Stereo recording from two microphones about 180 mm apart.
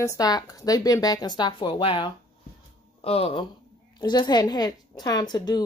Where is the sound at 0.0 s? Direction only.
20° left (ahead or behind).